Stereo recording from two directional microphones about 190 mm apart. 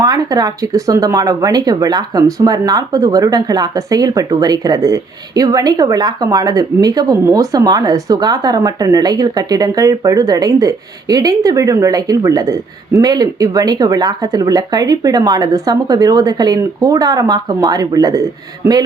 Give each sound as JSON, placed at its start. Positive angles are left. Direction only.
{"t": 0.0, "sound": "speech", "side_deg": -20}